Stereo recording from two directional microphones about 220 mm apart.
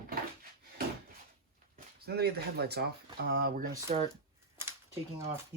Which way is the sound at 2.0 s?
45° right (ahead or behind).